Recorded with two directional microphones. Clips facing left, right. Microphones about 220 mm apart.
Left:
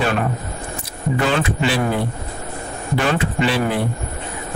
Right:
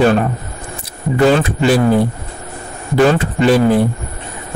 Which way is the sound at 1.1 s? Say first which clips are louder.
Right 8 dB; 40° right (ahead or behind).